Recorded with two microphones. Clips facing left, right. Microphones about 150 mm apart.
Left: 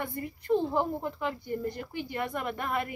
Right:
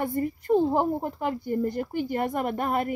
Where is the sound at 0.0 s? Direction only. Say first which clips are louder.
Right 8 dB; 45° right (ahead or behind).